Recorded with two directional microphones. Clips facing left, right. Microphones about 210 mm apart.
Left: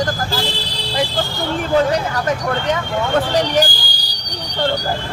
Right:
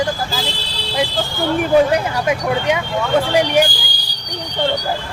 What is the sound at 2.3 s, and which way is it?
Speech, 10° right (ahead or behind).